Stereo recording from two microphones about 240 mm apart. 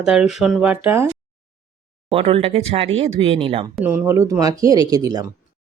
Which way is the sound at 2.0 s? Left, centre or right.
Right.